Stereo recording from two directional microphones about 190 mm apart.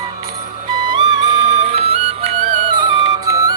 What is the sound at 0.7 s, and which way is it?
Music, 25° right (ahead or behind).